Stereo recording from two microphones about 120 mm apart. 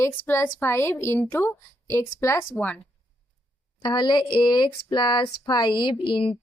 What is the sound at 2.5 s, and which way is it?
Speech, 10° left (ahead or behind).